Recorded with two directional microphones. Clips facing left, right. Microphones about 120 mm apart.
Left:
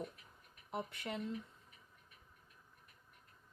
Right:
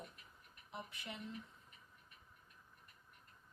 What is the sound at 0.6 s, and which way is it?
Speech, 60° left (ahead or behind).